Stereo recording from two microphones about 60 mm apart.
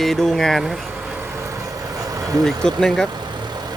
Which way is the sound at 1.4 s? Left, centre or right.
Right.